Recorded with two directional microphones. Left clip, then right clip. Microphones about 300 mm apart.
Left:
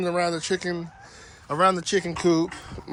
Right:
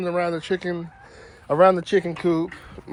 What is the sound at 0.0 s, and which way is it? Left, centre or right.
Speech, centre.